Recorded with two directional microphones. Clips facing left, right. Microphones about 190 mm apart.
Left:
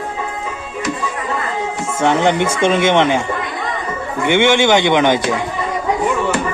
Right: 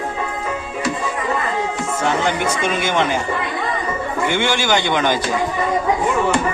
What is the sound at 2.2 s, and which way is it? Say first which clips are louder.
Speech: left 5 dB; 25° left (ahead or behind).